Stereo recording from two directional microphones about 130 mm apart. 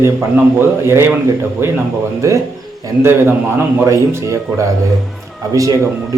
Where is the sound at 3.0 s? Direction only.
20° right (ahead or behind).